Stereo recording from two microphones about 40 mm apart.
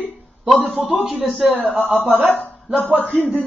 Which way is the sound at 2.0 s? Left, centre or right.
Right.